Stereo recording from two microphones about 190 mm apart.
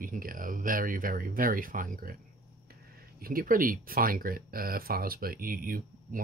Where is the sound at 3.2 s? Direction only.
50° right (ahead or behind).